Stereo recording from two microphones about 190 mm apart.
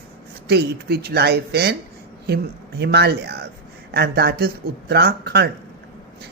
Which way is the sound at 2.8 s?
60° right (ahead or behind).